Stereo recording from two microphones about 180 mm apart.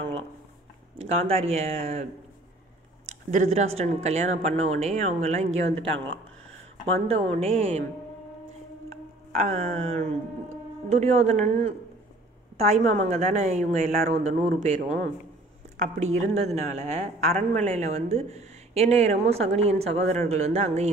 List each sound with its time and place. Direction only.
0.9 s a woman's voice: 35° right (ahead or behind)
3.1 s a woman's voice: 45° right (ahead or behind)
7.1 s a woman's voice: 35° right (ahead or behind)
9.3 s a woman's voice: 40° right (ahead or behind)
16.0 s a woman's voice: 40° right (ahead or behind)